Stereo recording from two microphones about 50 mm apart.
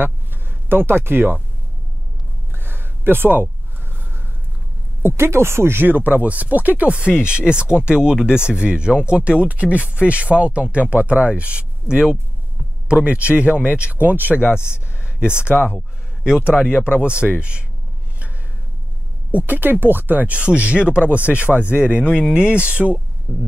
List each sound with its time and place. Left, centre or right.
0.0 s speech: right
2.5 s a sound: right
5.0 s speech: right
7.1 s speech: centre
13.9 s speech: right
14.5 s speech: centre
16.7 s speech: left
17.2 s speech: right
19.3 s speech: right